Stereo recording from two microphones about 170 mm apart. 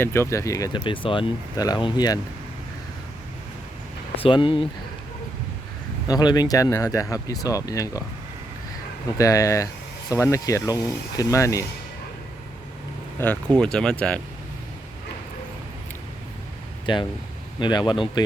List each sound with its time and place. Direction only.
0.0 s speech: 15° left (ahead or behind)
4.2 s speech: 30° left (ahead or behind)
6.1 s speech: 25° left (ahead or behind)
9.1 s speech: 20° left (ahead or behind)
13.1 s speech: 10° left (ahead or behind)
16.8 s speech: 30° left (ahead or behind)